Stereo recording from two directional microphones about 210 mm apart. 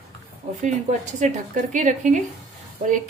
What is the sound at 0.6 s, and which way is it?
Speech, 35° right (ahead or behind).